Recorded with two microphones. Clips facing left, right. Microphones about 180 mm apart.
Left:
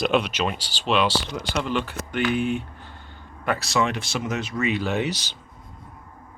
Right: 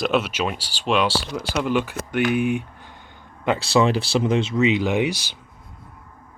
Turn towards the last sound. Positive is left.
turn(degrees=-10)  # may be behind; listen again after turning